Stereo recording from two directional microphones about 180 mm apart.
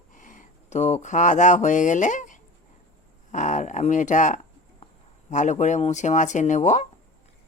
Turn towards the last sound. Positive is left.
turn(degrees=40)  # may be behind; listen again after turning